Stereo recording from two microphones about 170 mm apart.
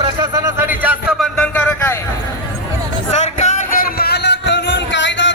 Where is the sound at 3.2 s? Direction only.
40° left (ahead or behind).